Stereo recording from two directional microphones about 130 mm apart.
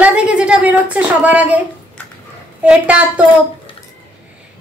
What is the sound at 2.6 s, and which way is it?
Speech, 10° right (ahead or behind).